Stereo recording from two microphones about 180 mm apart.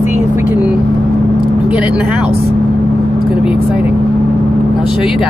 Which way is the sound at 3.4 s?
5° right (ahead or behind).